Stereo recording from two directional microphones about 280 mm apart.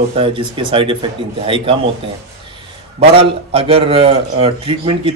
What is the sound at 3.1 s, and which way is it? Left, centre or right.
A man's voice, centre.